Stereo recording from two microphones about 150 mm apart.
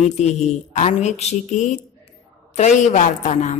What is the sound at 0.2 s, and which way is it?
A woman's voice, 50° left (ahead or behind).